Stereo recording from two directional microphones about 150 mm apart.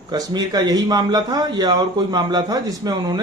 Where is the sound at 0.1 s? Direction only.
25° right (ahead or behind).